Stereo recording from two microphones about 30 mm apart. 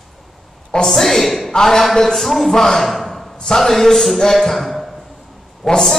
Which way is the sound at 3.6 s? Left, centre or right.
Centre.